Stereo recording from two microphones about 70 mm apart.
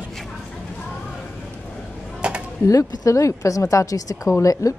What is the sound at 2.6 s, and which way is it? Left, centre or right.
Speech, left.